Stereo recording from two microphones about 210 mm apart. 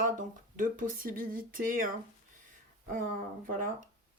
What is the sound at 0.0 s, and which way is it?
Speech, 40° right (ahead or behind).